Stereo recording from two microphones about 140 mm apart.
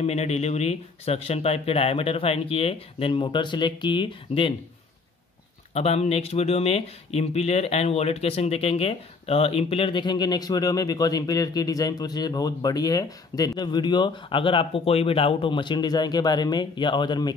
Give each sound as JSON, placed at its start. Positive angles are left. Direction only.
{"t": 0.0, "sound": "speech", "side_deg": 50}
{"t": 5.7, "sound": "speech", "side_deg": 45}